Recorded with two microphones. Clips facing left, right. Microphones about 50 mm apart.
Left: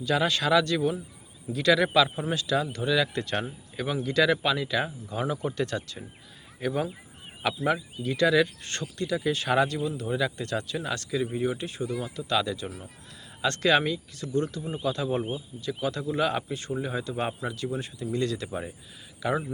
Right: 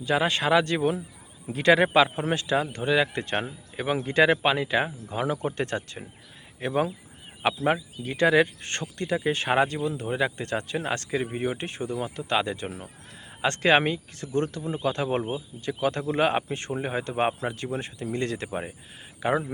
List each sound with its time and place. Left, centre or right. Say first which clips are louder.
0.0 s speech: right 1 dB; right
7.4 s speech: right 2 dB; right